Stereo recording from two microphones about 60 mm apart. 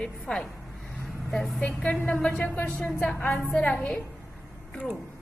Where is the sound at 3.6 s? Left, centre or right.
Centre.